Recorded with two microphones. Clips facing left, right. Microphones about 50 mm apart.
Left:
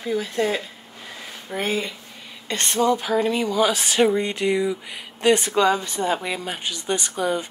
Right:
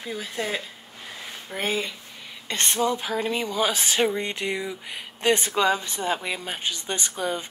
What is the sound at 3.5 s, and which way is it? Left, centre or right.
Speech, right.